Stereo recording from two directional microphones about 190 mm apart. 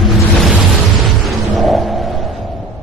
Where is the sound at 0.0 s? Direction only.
Centre (ahead or behind).